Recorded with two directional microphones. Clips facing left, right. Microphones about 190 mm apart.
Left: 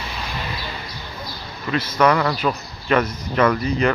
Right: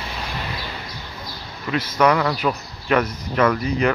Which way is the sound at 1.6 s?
15° right (ahead or behind).